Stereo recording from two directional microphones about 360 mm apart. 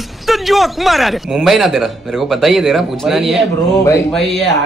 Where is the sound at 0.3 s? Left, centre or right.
Centre.